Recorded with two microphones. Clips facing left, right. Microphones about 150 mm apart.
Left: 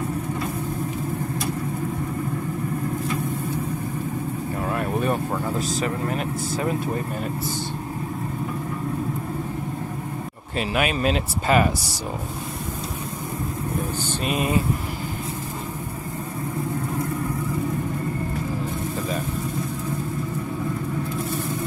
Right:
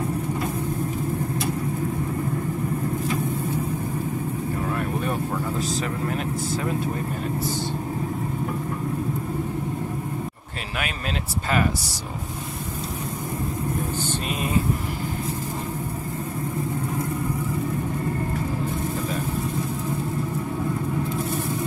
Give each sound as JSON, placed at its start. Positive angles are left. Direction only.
{"t": 10.8, "sound": "speech", "side_deg": 15}